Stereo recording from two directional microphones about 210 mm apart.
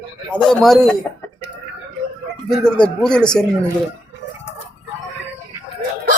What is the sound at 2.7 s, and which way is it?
Speech, 5° left (ahead or behind).